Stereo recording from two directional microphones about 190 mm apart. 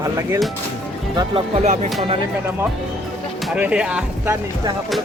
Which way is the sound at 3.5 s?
5° right (ahead or behind).